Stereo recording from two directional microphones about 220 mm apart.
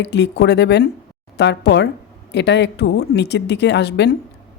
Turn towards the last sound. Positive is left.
turn(degrees=50)  # may be behind; listen again after turning